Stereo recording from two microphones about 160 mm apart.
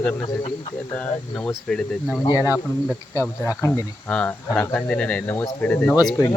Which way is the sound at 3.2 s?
20° left (ahead or behind).